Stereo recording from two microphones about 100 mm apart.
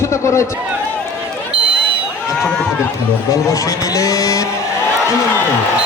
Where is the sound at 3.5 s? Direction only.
35° left (ahead or behind).